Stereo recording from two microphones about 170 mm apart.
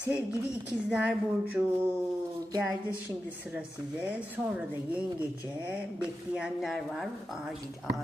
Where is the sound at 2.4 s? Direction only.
20° right (ahead or behind).